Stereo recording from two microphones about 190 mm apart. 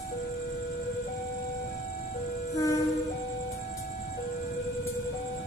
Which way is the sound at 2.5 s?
15° left (ahead or behind).